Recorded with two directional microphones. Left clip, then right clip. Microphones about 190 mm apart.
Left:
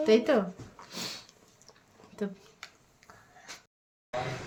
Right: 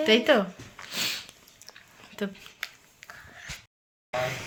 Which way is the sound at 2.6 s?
20° left (ahead or behind).